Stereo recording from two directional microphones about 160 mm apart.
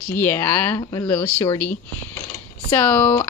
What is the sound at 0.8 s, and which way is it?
Speech, 20° left (ahead or behind).